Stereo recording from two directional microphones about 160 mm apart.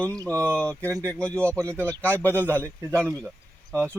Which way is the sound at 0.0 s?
10° left (ahead or behind).